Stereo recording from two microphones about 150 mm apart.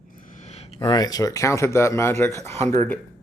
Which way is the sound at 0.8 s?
25° left (ahead or behind).